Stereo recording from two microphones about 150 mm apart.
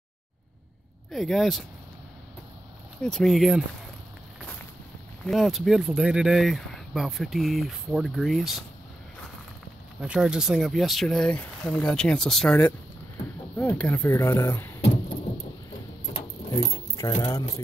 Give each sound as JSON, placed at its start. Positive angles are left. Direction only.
{"t": 1.1, "sound": "speech", "side_deg": 0}
{"t": 3.0, "sound": "speech", "side_deg": 5}
{"t": 5.2, "sound": "speech", "side_deg": 0}
{"t": 9.9, "sound": "speech", "side_deg": -5}
{"t": 16.5, "sound": "speech", "side_deg": 25}